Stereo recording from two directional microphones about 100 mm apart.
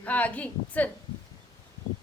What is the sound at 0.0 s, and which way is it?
Speech, 15° left (ahead or behind).